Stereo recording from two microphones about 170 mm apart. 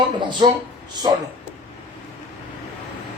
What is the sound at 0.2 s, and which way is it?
Speech, 25° right (ahead or behind).